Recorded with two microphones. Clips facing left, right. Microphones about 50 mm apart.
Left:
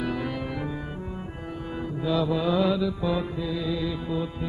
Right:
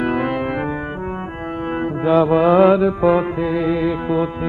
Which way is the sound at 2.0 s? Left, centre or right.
Right.